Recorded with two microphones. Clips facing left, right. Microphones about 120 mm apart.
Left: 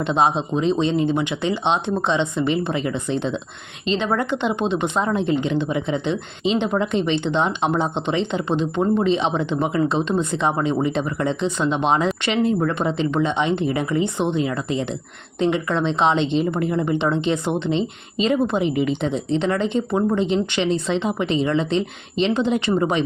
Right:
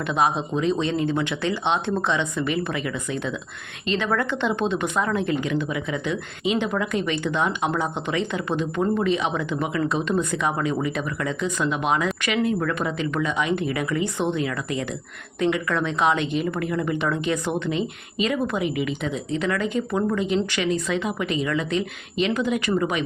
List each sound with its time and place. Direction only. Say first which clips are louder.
0.0 s speech: left 3 dB; 25° left (ahead or behind)